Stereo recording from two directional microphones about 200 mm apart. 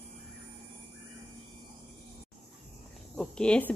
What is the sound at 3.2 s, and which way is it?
Speech, 5° left (ahead or behind).